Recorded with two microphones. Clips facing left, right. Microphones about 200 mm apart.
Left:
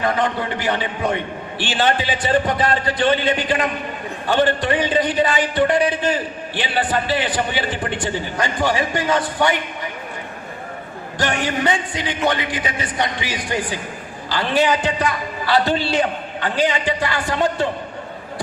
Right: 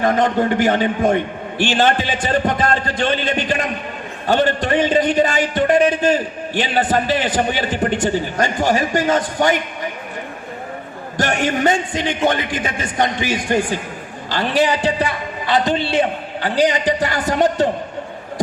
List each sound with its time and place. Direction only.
0.0 s a man's voice: 45° right (ahead or behind)
4.3 s a man's voice: 40° right (ahead or behind)
11.2 s a man's voice: 45° right (ahead or behind)
14.8 s a man's voice: 30° right (ahead or behind)
16.0 s a man's voice: 35° right (ahead or behind)